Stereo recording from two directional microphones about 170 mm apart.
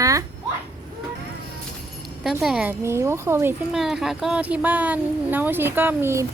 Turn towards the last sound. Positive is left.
turn(degrees=-15)  # may be behind; listen again after turning